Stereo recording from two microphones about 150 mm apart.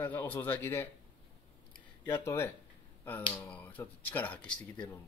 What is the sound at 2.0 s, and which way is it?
Speech, 15° left (ahead or behind).